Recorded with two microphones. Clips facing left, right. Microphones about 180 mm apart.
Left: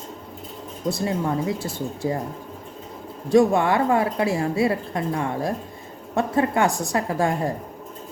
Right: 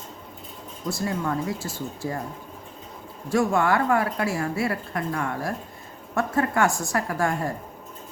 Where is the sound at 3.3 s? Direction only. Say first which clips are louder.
Left 4 dB; 20° left (ahead or behind).